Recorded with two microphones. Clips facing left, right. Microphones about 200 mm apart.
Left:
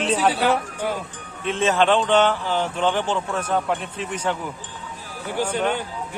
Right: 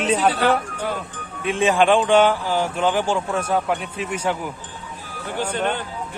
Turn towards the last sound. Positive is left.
turn(degrees=10)  # may be behind; listen again after turning